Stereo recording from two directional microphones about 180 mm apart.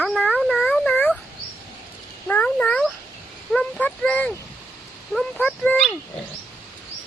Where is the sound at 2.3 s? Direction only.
10° left (ahead or behind).